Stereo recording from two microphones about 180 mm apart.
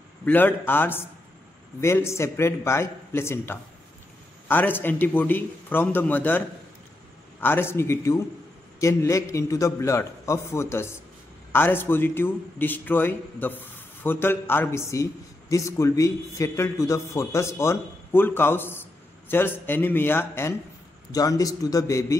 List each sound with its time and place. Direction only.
0.2 s a man's voice: 10° left (ahead or behind)